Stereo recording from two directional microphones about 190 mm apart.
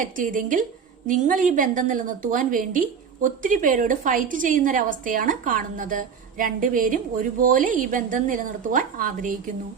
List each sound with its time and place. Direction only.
0.0 s a woman's voice: 45° right (ahead or behind)